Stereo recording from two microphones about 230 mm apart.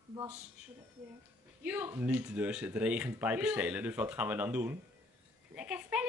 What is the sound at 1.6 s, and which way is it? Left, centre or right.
Speech, centre.